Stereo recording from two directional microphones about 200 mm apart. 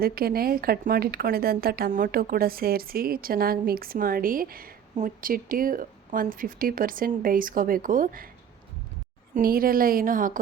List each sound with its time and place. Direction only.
0.0 s a woman's voice: 50° right (ahead or behind)
9.3 s a woman's voice: 45° right (ahead or behind)